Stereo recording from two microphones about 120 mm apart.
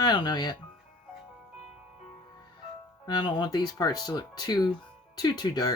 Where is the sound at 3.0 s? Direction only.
35° left (ahead or behind).